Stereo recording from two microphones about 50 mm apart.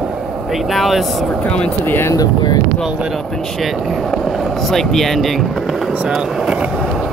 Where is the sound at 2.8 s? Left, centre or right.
Centre.